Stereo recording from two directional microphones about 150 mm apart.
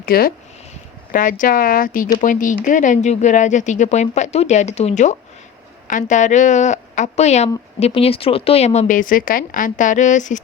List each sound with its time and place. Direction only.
0.0 s speech: 85° left
1.1 s a woman's voice: 65° left (ahead or behind)